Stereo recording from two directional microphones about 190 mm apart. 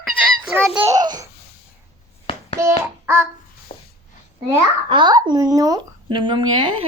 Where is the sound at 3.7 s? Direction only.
35° left (ahead or behind).